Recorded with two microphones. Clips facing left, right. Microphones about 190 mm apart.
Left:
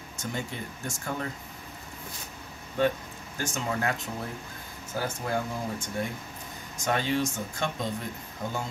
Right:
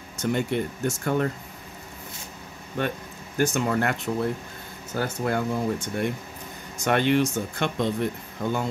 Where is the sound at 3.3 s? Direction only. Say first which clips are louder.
Right 8 dB; 65° right (ahead or behind).